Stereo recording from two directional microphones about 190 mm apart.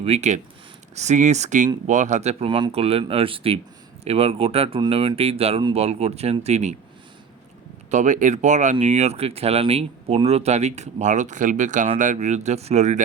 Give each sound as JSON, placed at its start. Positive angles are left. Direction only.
{"t": 0.0, "sound": "speech", "side_deg": -35}
{"t": 7.9, "sound": "speech", "side_deg": -40}